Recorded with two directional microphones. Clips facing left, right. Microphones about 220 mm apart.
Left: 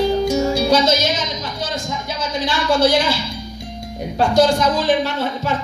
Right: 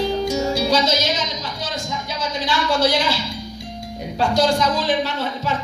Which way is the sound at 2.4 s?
50° left (ahead or behind).